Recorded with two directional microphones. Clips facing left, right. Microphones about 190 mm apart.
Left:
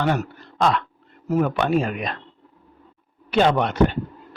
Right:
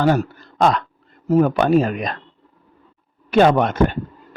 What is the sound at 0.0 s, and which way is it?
A man's voice, 40° right (ahead or behind).